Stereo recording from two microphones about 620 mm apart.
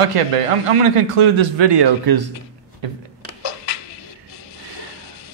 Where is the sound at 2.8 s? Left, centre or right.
Right.